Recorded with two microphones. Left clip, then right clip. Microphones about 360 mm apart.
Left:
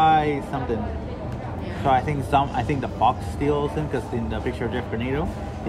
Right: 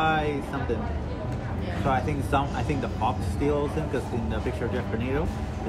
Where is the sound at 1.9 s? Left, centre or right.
Left.